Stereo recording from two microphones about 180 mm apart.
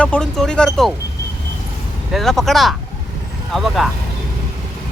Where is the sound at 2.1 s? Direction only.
Centre (ahead or behind).